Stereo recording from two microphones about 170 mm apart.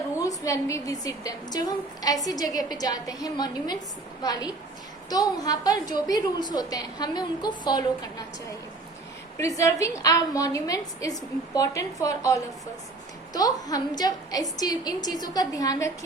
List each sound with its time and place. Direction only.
0.2 s a woman's voice: 20° left (ahead or behind)
9.4 s a woman's voice: 15° left (ahead or behind)